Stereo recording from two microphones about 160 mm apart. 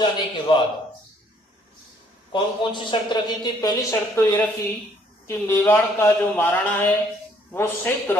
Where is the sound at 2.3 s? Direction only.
30° left (ahead or behind).